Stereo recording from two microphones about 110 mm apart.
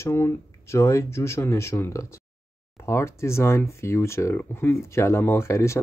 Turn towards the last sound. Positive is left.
turn(degrees=25)  # may be behind; listen again after turning